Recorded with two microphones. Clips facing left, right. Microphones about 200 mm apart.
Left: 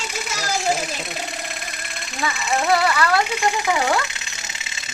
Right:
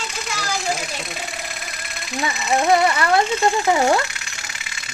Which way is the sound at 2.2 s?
20° right (ahead or behind).